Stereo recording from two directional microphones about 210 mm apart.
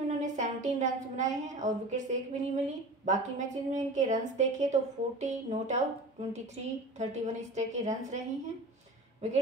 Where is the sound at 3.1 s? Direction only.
35° right (ahead or behind).